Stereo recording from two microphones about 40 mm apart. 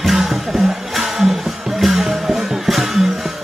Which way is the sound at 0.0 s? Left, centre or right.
Centre.